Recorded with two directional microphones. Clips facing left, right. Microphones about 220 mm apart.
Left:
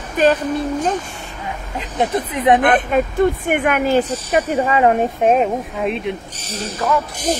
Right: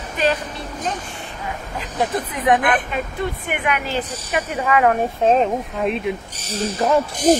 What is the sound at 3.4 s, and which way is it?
Speech, 45° left (ahead or behind).